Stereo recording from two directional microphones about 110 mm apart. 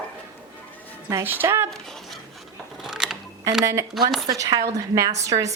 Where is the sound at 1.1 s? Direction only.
20° right (ahead or behind).